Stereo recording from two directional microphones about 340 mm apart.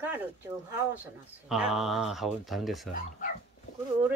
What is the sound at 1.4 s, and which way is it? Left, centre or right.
Speech, centre.